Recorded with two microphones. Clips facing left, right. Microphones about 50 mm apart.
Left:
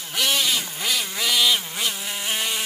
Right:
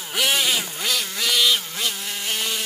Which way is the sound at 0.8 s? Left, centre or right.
Centre.